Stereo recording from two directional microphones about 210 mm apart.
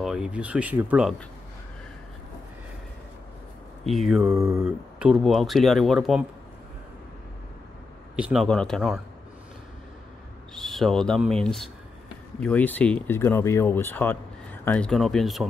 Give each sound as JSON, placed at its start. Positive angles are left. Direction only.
{"t": 0.0, "sound": "speech", "side_deg": -5}
{"t": 3.8, "sound": "speech", "side_deg": 0}
{"t": 4.2, "sound": "mantra", "side_deg": -15}
{"t": 4.6, "sound": "speech", "side_deg": -5}
{"t": 8.2, "sound": "speech", "side_deg": 0}
{"t": 10.5, "sound": "speech", "side_deg": 0}